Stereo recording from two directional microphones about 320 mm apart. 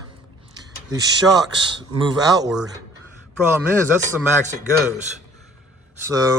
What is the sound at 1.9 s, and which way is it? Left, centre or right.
Speech, centre.